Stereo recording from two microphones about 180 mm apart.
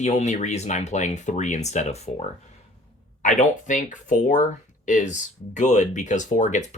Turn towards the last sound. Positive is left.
turn(degrees=40)  # may be behind; listen again after turning